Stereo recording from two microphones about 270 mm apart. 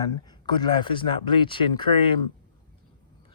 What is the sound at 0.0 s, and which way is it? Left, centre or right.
Speech, centre.